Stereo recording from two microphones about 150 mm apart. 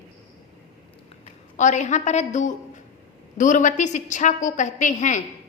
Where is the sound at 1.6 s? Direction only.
55° left (ahead or behind).